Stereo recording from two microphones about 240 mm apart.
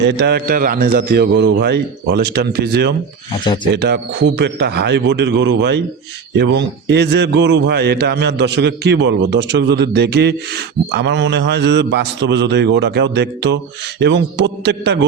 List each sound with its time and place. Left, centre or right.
0.0 s a man's voice: right
3.4 s speech: centre
3.8 s a man's voice: right